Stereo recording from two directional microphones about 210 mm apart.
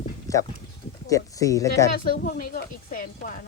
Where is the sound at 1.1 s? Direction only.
15° left (ahead or behind).